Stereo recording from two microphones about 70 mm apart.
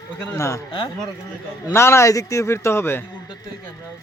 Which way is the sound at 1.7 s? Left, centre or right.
Left.